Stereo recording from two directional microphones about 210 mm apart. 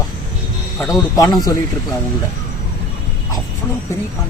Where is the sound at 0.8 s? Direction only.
15° left (ahead or behind).